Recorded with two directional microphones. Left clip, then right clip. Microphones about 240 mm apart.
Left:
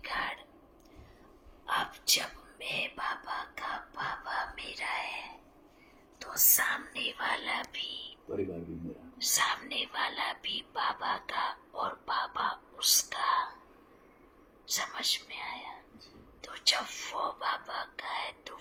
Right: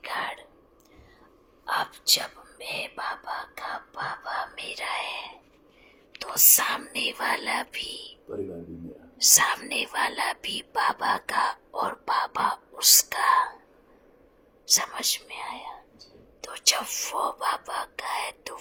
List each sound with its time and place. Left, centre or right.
0.0 s a sound: right
1.6 s speech: right
9.2 s speech: right
14.7 s speech: right